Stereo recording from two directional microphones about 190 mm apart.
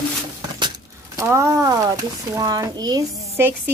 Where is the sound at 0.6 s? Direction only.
20° right (ahead or behind).